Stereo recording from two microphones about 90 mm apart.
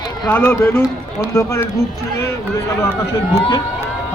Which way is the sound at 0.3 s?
25° left (ahead or behind).